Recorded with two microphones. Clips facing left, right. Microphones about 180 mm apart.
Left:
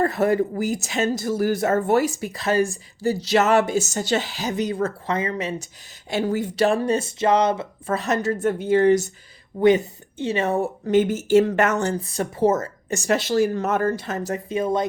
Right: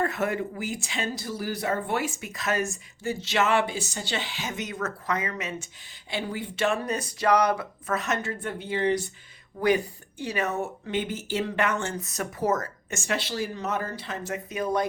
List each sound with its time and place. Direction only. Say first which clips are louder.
0.0 s speech: left 7 dB; 35° left (ahead or behind)
6.1 s speech: left 9 dB; 45° left (ahead or behind)
9.6 s speech: left 7 dB; 25° left (ahead or behind)
14.6 s speech: left 3 dB; 25° left (ahead or behind)